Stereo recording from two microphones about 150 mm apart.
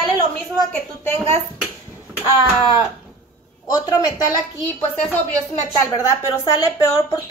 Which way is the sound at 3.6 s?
25° left (ahead or behind).